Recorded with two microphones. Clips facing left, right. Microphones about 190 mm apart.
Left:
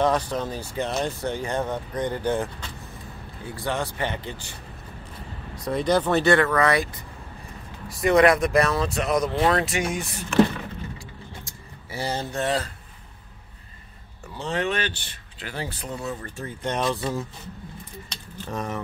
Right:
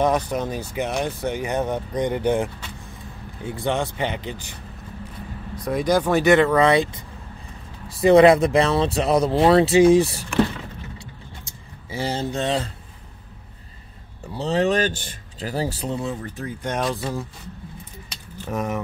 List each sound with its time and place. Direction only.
0.0 s speech: 15° right (ahead or behind)
5.7 s speech: 10° right (ahead or behind); by 10.2 s 30° right (ahead or behind)
11.9 s speech: 15° right (ahead or behind)
14.3 s speech: 35° right (ahead or behind)
16.4 s speech: centre (ahead or behind)
16.9 s speech: 15° right (ahead or behind)
18.1 s a sound: 10° right (ahead or behind)